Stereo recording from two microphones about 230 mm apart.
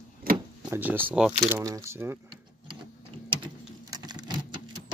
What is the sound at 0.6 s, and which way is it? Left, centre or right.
Speech, centre.